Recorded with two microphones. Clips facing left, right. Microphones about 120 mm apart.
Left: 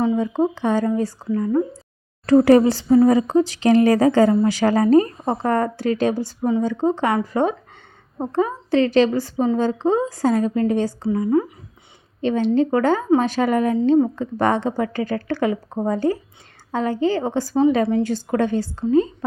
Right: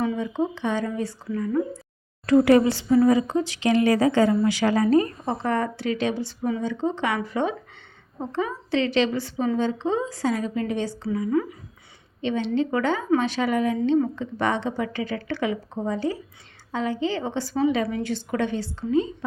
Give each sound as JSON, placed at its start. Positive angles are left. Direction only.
{"t": 0.2, "sound": "a woman's voice", "side_deg": 40}